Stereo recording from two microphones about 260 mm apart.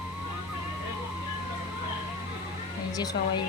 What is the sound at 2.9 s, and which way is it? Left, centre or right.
Speech, centre.